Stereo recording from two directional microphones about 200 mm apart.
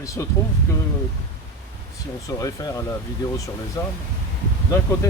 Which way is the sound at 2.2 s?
15° left (ahead or behind).